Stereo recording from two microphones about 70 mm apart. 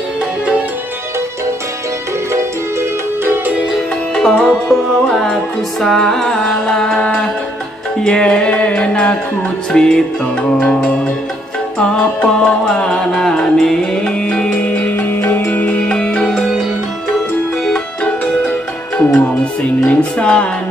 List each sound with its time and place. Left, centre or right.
2.3 s music: right
4.1 s music: centre
14.9 s music: left
15.9 s music: centre
18.0 s music: left
19.9 s music: centre